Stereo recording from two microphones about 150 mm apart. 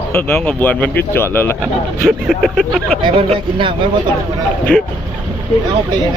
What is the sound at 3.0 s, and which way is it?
Speech, 40° right (ahead or behind).